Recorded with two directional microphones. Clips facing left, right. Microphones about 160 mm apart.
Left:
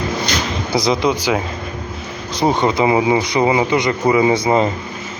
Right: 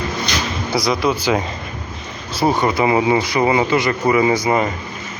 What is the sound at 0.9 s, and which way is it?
Speech, 15° left (ahead or behind).